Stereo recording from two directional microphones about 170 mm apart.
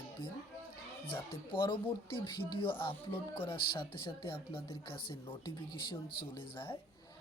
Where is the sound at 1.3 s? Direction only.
30° left (ahead or behind).